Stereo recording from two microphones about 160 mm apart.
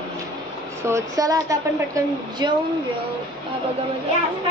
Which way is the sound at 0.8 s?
20° right (ahead or behind).